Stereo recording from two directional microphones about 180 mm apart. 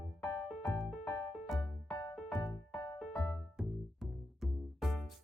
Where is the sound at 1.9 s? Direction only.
20° left (ahead or behind).